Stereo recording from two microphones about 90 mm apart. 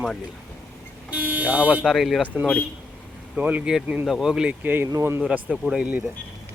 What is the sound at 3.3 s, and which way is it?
Speech, 15° right (ahead or behind).